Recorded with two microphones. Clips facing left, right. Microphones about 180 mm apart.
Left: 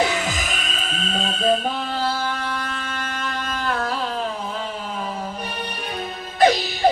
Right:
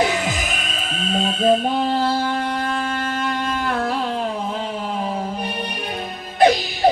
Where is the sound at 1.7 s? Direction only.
40° right (ahead or behind).